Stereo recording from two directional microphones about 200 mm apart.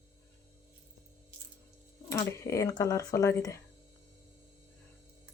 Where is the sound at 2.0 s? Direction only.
15° left (ahead or behind).